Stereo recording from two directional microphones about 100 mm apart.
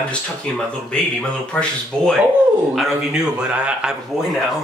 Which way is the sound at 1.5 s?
10° left (ahead or behind).